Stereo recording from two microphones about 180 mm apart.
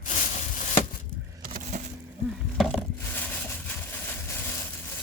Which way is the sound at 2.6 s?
Centre (ahead or behind).